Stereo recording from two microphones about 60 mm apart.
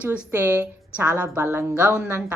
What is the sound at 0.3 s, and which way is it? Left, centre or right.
A woman's voice, right.